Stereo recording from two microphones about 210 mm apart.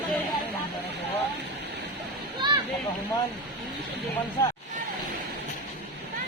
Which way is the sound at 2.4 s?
20° right (ahead or behind).